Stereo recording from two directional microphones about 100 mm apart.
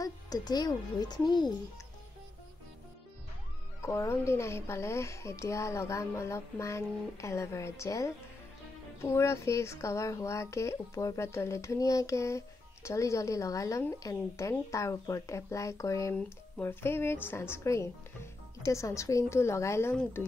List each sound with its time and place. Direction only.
0.0 s speech: 40° left (ahead or behind)
3.8 s speech: 30° left (ahead or behind)
16.2 s speech: 20° left (ahead or behind)